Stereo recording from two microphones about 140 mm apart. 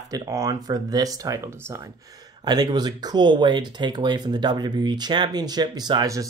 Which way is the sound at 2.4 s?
30° right (ahead or behind).